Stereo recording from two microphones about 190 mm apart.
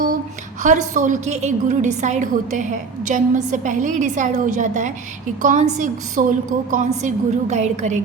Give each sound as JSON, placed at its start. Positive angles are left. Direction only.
{"t": 0.6, "sound": "a woman's voice", "side_deg": -40}